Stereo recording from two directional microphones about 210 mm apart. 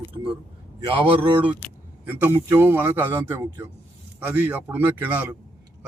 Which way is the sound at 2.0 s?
10° right (ahead or behind).